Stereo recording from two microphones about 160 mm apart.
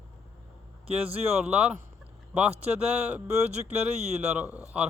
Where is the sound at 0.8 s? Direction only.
40° right (ahead or behind).